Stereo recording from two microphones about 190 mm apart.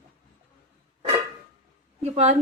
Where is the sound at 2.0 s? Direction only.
35° right (ahead or behind).